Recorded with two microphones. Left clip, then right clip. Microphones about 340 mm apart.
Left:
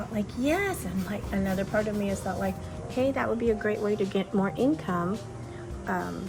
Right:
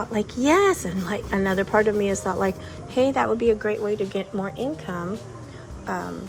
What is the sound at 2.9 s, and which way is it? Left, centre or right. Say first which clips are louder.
A woman's voice: right 6 dB; centre.